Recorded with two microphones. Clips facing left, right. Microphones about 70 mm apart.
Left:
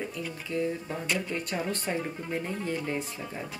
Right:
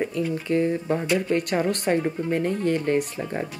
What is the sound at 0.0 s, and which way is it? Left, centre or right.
Speech, right.